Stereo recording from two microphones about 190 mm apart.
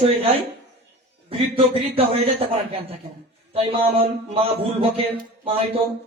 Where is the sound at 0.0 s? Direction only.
30° right (ahead or behind).